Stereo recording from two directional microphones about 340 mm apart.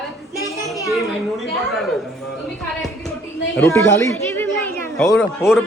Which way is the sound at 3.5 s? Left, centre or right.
Centre.